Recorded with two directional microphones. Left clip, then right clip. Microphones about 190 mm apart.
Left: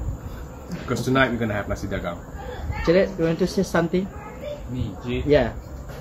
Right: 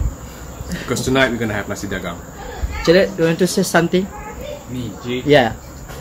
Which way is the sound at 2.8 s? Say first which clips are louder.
Right 6 dB; 30° right (ahead or behind).